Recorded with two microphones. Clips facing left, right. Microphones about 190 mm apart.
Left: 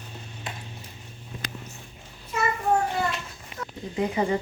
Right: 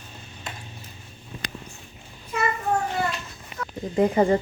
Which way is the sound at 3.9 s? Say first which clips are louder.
Right 6 dB; 45° right (ahead or behind).